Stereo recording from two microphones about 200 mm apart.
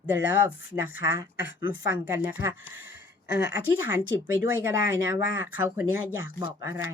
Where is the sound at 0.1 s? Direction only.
10° right (ahead or behind).